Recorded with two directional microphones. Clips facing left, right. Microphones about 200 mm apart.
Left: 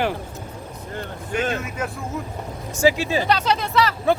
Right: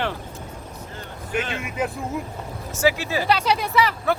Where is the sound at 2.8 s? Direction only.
15° left (ahead or behind).